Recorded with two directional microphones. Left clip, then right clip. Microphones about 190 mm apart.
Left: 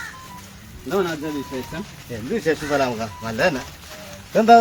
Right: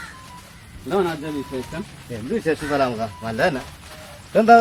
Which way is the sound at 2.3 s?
10° left (ahead or behind).